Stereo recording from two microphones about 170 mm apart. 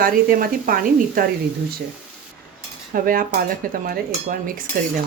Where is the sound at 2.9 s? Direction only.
55° right (ahead or behind).